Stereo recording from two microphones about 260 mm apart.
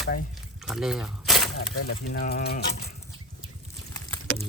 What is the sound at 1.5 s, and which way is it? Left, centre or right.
Speech, left.